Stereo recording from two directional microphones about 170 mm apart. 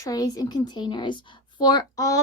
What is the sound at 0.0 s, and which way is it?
A woman's voice, 20° left (ahead or behind).